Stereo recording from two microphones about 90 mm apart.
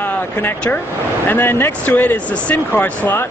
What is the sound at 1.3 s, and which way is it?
Speech, 25° left (ahead or behind).